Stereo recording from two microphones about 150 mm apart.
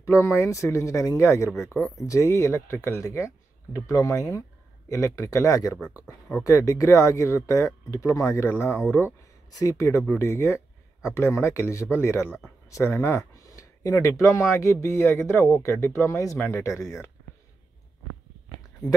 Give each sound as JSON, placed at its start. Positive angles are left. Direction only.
{"t": 0.0, "sound": "speech", "side_deg": 20}
{"t": 1.8, "sound": "speech", "side_deg": 0}
{"t": 2.0, "sound": "speech", "side_deg": 20}